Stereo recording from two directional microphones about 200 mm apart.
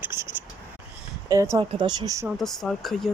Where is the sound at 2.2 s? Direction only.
Centre (ahead or behind).